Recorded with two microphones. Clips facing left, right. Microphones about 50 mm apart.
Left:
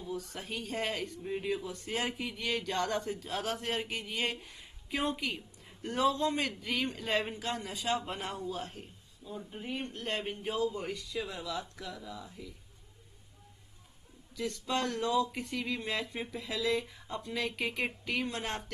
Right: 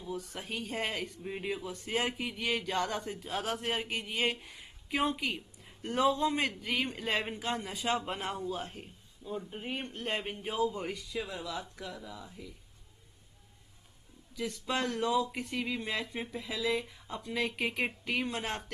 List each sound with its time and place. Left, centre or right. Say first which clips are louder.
0.0 s a man's voice: even; centre
9.9 s speech: even; centre
14.3 s a man's voice: even; centre